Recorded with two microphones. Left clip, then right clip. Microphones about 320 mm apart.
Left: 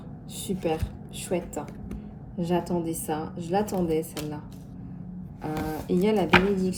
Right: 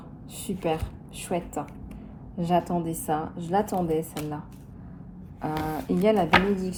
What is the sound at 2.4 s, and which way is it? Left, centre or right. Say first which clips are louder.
Speech: right 3 dB; centre.